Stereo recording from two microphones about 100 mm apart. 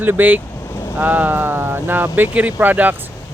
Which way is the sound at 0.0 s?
20° right (ahead or behind).